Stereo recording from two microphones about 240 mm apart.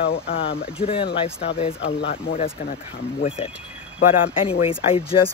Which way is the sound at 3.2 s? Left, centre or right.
Left.